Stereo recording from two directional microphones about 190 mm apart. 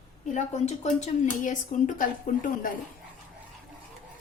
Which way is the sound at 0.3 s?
35° left (ahead or behind).